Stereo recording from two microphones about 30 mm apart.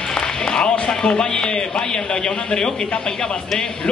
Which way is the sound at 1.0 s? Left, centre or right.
Left.